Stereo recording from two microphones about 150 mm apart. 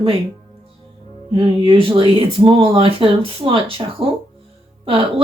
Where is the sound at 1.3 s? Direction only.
35° right (ahead or behind).